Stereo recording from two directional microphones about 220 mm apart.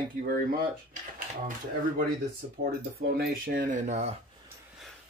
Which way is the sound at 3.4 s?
35° right (ahead or behind).